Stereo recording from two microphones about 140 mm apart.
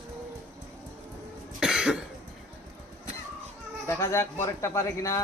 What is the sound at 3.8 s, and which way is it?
A man's voice, 20° left (ahead or behind).